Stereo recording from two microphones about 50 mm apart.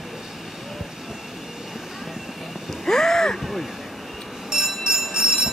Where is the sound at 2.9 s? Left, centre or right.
Centre.